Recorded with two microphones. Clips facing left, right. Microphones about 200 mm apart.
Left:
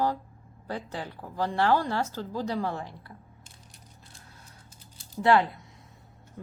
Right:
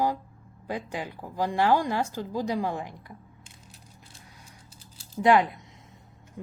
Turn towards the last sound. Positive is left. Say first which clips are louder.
# right 2 dB
turn(degrees=-15)  # may be behind; listen again after turning